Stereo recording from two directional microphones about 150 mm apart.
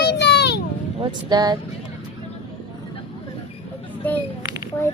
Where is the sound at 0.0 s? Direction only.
90° left.